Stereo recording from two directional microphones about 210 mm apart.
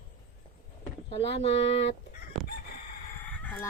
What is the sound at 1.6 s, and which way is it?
Fowl, 60° left (ahead or behind).